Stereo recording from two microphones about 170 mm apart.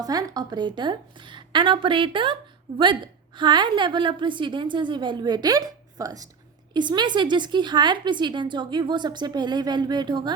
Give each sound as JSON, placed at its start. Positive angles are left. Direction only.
{"t": 0.0, "sound": "a woman's voice", "side_deg": -20}